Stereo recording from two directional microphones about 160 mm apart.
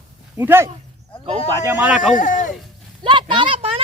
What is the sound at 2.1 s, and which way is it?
Speech, 55° left (ahead or behind).